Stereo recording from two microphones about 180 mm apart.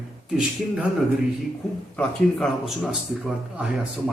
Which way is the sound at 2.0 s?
Centre (ahead or behind).